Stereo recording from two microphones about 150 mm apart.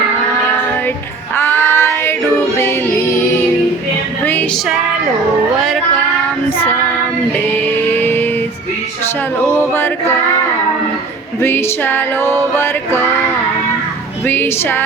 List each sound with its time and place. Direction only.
1.4 s female singing: 15° left (ahead or behind)
7.9 s music: 15° left (ahead or behind)
9.5 s music: 15° left (ahead or behind)
11.3 s music: 15° left (ahead or behind)
14.3 s music: 15° left (ahead or behind)